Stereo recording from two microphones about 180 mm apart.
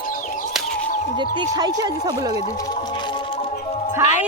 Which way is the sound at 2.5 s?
20° left (ahead or behind).